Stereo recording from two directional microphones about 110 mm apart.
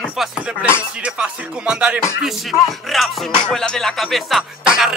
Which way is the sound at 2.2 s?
Centre (ahead or behind).